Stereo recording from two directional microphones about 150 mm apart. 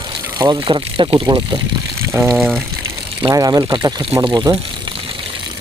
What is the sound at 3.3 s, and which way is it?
Speech, 25° right (ahead or behind).